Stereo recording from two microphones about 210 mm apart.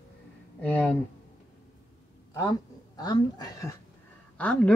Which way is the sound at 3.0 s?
20° left (ahead or behind).